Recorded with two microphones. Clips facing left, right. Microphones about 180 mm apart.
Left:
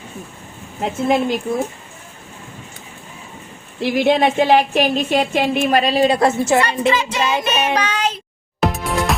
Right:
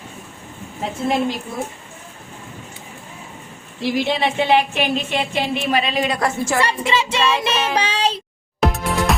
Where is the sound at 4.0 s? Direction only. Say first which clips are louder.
Left 6 dB; 50° left (ahead or behind); by 6.6 s 25° left (ahead or behind).